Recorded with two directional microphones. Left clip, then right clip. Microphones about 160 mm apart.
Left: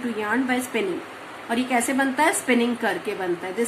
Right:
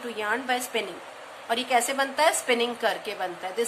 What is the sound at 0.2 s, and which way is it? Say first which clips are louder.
A woman's voice: left 2 dB; 55° right (ahead or behind).